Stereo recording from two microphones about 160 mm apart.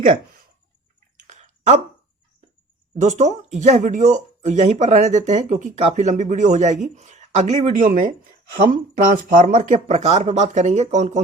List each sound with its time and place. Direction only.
0.0 s a sound: 60° right (ahead or behind)
1.1 s chewing: 50° right (ahead or behind)
3.0 s speech: 45° right (ahead or behind)